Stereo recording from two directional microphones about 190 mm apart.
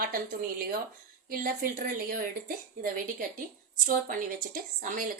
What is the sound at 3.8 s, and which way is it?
Speech, 45° right (ahead or behind).